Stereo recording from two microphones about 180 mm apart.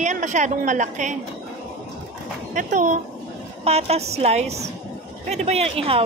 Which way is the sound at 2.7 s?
45° right (ahead or behind).